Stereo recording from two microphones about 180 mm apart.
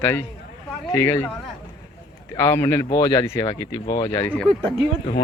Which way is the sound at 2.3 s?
15° left (ahead or behind).